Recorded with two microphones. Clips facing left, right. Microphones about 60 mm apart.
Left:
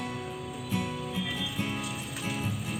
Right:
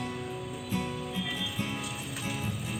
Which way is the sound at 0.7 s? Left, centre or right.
Centre.